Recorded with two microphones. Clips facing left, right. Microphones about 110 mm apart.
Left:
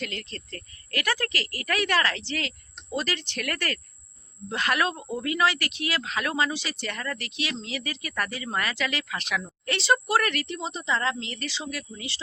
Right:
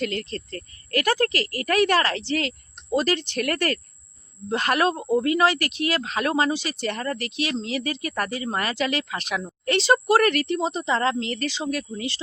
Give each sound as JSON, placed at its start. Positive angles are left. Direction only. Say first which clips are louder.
{"t": 0.0, "sound": "speech", "louder": "right 8 dB", "side_deg": -40}